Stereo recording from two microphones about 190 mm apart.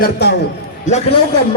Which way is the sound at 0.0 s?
60° left (ahead or behind).